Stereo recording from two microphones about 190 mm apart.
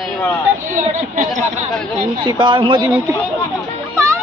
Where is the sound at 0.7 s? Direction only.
40° right (ahead or behind).